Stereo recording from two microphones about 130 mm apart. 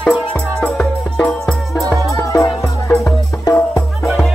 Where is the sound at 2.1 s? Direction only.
25° left (ahead or behind).